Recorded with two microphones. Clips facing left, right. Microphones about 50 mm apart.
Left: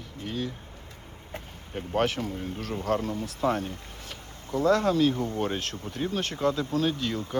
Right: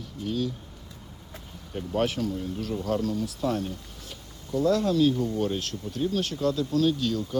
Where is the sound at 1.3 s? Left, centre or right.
Left.